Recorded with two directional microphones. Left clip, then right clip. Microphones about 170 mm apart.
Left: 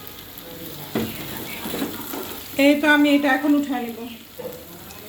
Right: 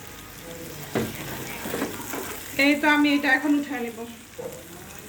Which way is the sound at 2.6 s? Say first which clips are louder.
Left 4 dB; 30° left (ahead or behind).